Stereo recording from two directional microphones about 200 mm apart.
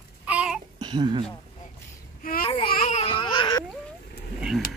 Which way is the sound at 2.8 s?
30° left (ahead or behind).